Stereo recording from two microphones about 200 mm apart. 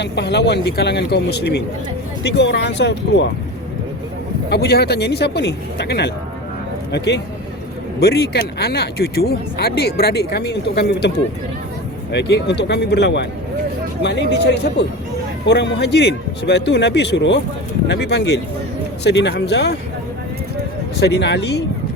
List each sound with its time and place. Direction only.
0.0 s speech: 60° left (ahead or behind)
4.4 s speech: 55° left (ahead or behind)
12.1 s speech: 60° left (ahead or behind)
21.0 s speech: 60° left (ahead or behind)